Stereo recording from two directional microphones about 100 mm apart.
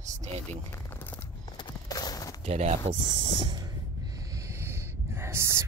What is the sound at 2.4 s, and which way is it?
Speech, 90° right.